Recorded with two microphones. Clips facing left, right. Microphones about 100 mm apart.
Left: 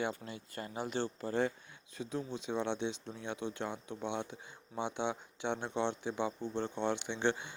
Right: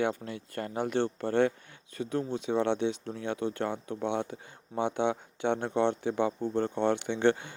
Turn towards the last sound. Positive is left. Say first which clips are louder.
# right 8 dB
turn(degrees=-55)  # may be behind; listen again after turning